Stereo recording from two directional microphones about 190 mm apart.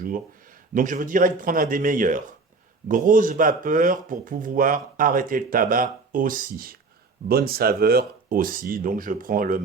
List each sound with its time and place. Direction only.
0.7 s speech: 45° right (ahead or behind)